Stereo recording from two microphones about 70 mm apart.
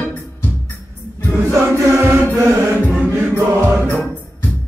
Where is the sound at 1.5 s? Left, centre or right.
Right.